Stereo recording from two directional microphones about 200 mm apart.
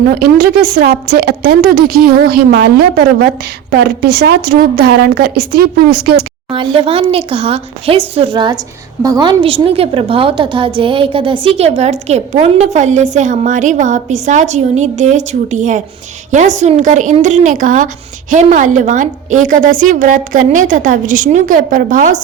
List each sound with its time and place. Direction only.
0.1 s a woman's voice: 50° right (ahead or behind)
6.5 s a woman's voice: 25° right (ahead or behind); by 22.2 s 40° right (ahead or behind)